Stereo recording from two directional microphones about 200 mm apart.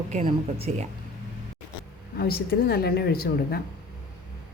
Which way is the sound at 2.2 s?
50° left (ahead or behind).